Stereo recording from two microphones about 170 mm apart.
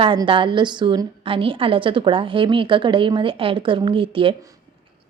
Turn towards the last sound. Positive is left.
turn(degrees=-30)  # may be behind; listen again after turning